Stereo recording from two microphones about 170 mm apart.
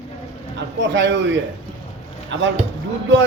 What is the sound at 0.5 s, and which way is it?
A man's voice, 90° right.